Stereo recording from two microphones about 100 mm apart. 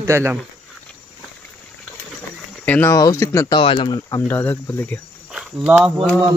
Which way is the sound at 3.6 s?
65° left (ahead or behind).